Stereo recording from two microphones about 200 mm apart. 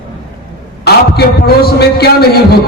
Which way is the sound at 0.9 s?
55° left (ahead or behind).